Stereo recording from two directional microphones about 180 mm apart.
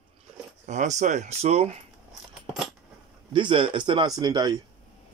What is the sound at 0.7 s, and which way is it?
Speech, 40° right (ahead or behind).